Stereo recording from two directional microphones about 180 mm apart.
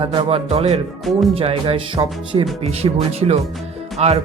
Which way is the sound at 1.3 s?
30° right (ahead or behind).